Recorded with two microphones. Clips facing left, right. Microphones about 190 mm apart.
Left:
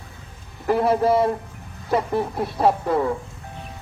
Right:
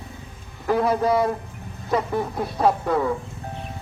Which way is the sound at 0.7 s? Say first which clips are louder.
Left 2 dB; 5° left (ahead or behind).